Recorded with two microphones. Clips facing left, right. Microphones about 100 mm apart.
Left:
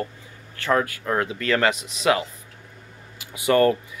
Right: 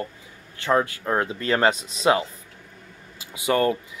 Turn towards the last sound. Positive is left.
turn(degrees=-15)  # may be behind; listen again after turning